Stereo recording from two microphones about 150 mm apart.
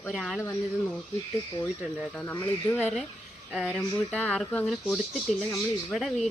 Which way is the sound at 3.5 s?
5° right (ahead or behind).